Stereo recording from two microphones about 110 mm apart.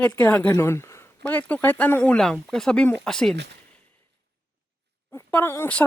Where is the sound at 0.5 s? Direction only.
25° left (ahead or behind).